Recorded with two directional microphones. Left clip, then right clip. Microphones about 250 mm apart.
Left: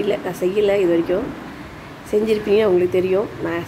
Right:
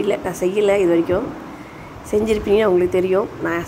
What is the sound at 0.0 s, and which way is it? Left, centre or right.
Speech, centre.